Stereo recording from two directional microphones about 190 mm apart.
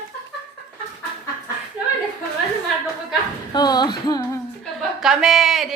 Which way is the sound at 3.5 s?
20° left (ahead or behind).